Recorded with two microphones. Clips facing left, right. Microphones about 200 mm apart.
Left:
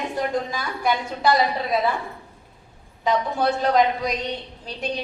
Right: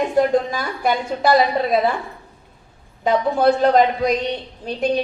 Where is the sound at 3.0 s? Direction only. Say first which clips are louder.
Right 5 dB; 50° right (ahead or behind).